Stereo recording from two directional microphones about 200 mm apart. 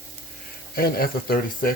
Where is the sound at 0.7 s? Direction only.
50° left (ahead or behind).